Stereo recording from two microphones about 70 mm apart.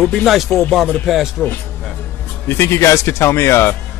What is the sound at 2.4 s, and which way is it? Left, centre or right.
Speech, left.